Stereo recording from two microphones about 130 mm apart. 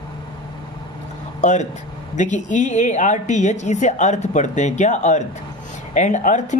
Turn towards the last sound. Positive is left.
turn(degrees=70)  # may be behind; listen again after turning